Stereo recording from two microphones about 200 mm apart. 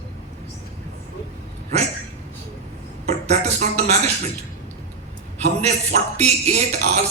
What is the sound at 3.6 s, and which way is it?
Music, 35° right (ahead or behind).